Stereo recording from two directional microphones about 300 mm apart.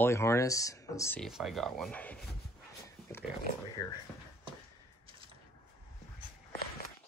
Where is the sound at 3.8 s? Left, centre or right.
Centre.